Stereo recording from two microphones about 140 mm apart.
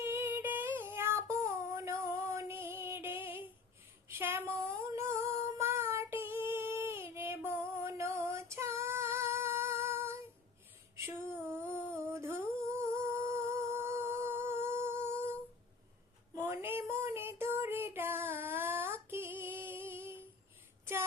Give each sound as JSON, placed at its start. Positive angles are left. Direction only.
{"t": 0.0, "sound": "female singing", "side_deg": -15}
{"t": 4.1, "sound": "child singing", "side_deg": -15}
{"t": 4.9, "sound": "humming", "side_deg": -20}
{"t": 5.5, "sound": "child singing", "side_deg": -20}
{"t": 10.9, "sound": "a sound", "side_deg": -20}
{"t": 16.3, "sound": "child singing", "side_deg": -20}